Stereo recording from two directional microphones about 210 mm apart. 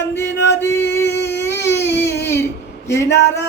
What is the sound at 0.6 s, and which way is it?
Music, 10° left (ahead or behind).